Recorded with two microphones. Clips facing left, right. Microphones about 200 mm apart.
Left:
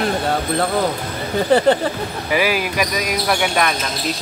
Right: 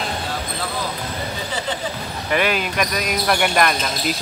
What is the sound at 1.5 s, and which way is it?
Speech, 60° left (ahead or behind).